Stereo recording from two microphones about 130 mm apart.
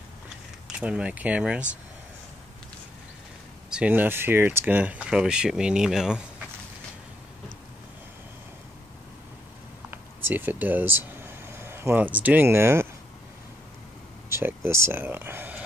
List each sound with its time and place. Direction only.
0.7 s speech: 10° right (ahead or behind)
3.7 s speech: 10° right (ahead or behind)
9.8 s speech: 15° right (ahead or behind)
14.3 s speech: 20° right (ahead or behind)